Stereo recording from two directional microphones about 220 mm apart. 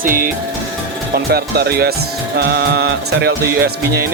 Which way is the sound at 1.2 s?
45° right (ahead or behind).